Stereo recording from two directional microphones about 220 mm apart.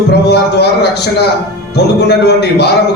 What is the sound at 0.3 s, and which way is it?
A man's voice, 50° left (ahead or behind).